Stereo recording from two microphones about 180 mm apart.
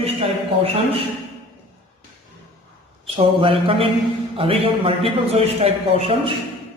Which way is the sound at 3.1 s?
30° right (ahead or behind).